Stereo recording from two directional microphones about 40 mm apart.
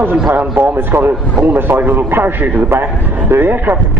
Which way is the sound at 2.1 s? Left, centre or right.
Right.